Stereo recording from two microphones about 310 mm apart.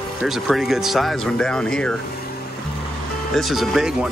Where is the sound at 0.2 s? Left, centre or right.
Centre.